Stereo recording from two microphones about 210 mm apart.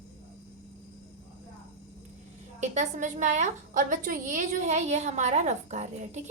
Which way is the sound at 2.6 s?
35° right (ahead or behind).